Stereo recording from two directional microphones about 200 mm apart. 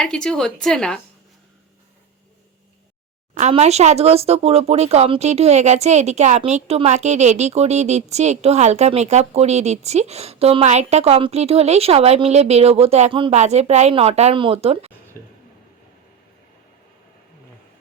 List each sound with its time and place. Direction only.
0.0 s a woman's voice: 5° left (ahead or behind)
3.3 s speech: 35° right (ahead or behind)